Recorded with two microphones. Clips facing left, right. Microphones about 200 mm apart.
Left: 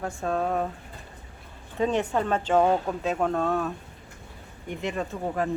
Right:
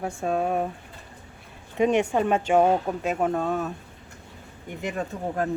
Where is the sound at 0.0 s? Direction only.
15° right (ahead or behind).